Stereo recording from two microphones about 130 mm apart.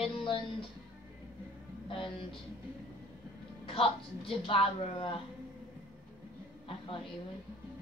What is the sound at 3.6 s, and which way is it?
Speech, 45° left (ahead or behind).